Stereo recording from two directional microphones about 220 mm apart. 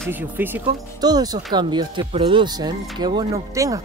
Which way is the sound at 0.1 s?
10° right (ahead or behind).